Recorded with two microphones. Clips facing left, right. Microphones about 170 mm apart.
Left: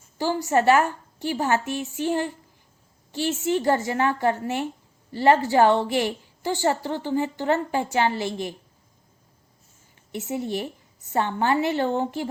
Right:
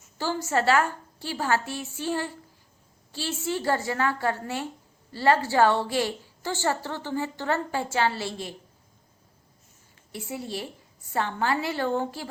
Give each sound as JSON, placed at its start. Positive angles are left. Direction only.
{"t": 0.2, "sound": "a woman's voice", "side_deg": 15}
{"t": 10.1, "sound": "a woman's voice", "side_deg": 20}